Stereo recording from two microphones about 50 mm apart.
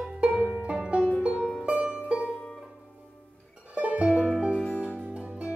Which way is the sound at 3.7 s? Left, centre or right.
Right.